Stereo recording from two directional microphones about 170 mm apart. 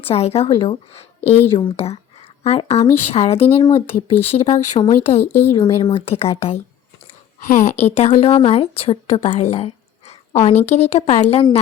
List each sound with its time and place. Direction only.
0.0 s a woman's voice: 35° left (ahead or behind)
5.2 s speech: 15° left (ahead or behind)
5.5 s a woman's voice: 25° left (ahead or behind)
7.3 s a woman's voice: 50° left (ahead or behind)